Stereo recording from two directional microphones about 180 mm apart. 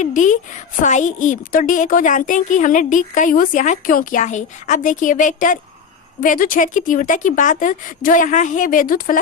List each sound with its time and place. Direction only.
0.0 s a woman's voice: 45° left (ahead or behind)